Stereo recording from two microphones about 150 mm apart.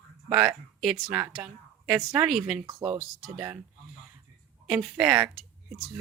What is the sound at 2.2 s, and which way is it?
Speech, centre (ahead or behind).